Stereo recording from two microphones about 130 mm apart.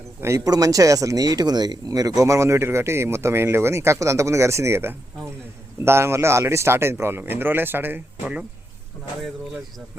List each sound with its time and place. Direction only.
0.2 s speech: 25° right (ahead or behind)